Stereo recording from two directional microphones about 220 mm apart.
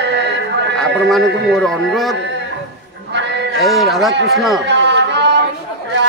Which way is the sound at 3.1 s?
50° right (ahead or behind).